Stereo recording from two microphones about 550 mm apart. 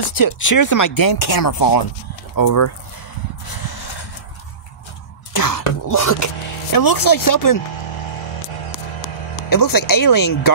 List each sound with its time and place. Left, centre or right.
0.1 s speech: left
3.4 s a sound: left
5.3 s throat clearing: left
5.9 s speech: left
9.5 s speech: left